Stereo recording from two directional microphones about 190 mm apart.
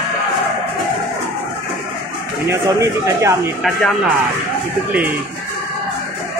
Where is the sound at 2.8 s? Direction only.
15° right (ahead or behind).